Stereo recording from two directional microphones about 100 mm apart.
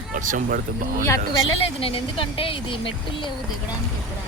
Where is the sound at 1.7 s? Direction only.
70° left (ahead or behind).